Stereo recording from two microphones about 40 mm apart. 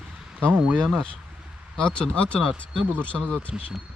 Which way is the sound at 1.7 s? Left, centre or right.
Left.